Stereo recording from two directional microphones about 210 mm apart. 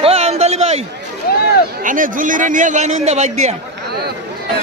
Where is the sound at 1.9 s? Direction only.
40° right (ahead or behind).